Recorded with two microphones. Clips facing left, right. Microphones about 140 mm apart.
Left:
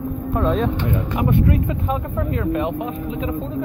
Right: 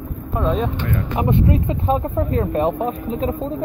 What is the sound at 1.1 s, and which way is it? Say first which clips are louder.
Speech: right 1 dB; 25° right (ahead or behind).